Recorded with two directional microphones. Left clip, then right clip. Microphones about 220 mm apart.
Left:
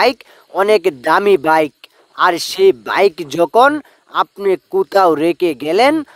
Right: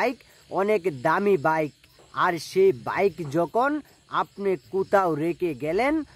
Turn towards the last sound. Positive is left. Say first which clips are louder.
# left 11 dB
turn(degrees=35)  # may be behind; listen again after turning